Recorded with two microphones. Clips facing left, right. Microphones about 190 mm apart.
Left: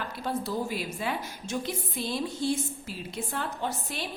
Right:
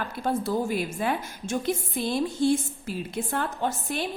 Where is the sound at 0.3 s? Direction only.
50° right (ahead or behind).